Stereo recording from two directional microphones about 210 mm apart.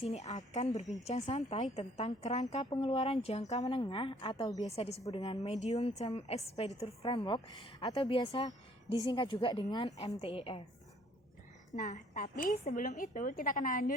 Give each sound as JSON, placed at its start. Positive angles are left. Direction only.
{"t": 0.0, "sound": "a woman's voice", "side_deg": 30}
{"t": 11.7, "sound": "a woman's voice", "side_deg": 35}